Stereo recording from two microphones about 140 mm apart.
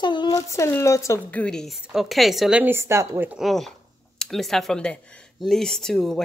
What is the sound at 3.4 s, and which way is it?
Speech, centre (ahead or behind).